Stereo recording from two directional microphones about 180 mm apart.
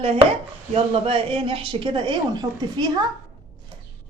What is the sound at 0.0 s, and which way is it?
Chopping, 35° right (ahead or behind).